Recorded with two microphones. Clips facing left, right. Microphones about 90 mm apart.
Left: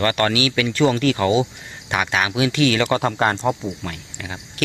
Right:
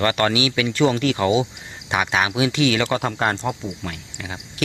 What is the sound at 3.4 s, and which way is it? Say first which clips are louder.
Speech: left 4 dB; 25° left (ahead or behind).